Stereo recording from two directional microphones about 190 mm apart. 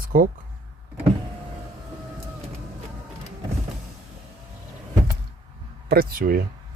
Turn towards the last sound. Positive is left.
turn(degrees=-50)  # may be behind; listen again after turning